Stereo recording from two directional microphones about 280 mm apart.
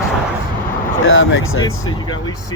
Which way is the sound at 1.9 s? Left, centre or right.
Centre.